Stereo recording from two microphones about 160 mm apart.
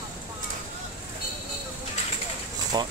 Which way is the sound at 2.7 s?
25° right (ahead or behind).